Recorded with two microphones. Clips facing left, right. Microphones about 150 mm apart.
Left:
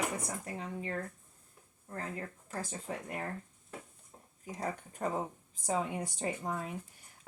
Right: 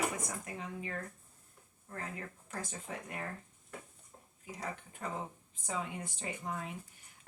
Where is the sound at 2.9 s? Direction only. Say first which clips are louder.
Left 4 dB; 35° left (ahead or behind).